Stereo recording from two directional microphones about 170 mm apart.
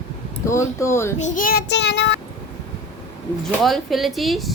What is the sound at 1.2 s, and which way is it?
Child singing, 50° left (ahead or behind).